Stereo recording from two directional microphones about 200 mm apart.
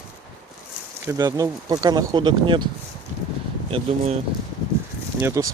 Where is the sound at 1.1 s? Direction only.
20° right (ahead or behind).